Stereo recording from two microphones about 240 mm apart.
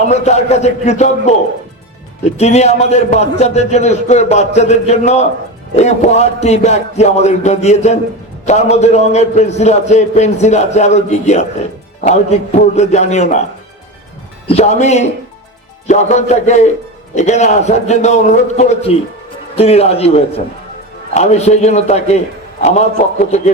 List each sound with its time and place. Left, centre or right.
0.1 s a man's voice: left
2.4 s a man's voice: left
14.4 s a man's voice: left